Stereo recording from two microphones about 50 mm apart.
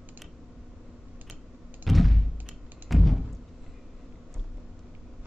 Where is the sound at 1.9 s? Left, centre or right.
Centre.